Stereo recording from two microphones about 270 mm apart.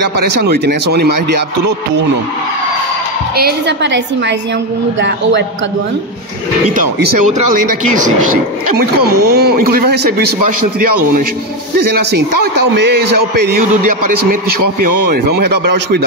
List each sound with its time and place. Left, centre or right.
0.9 s speech: right
3.3 s speech: right
9.0 s speech: right
10.4 s a man's voice: right
12.7 s speech: right
15.0 s speech: right